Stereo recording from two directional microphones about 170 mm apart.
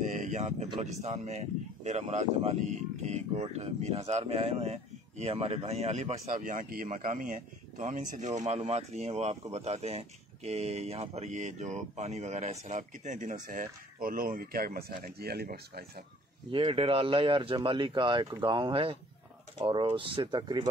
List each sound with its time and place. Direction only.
0.0 s a sound: 50° right (ahead or behind)
0.5 s speech: 35° right (ahead or behind); by 15.8 s 65° right (ahead or behind)
16.5 s speech: 30° right (ahead or behind)